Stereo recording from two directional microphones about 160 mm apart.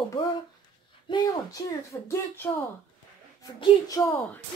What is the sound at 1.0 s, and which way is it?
Speech, 25° left (ahead or behind).